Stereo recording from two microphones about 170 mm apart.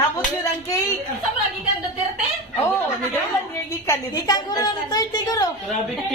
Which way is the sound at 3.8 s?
20° left (ahead or behind).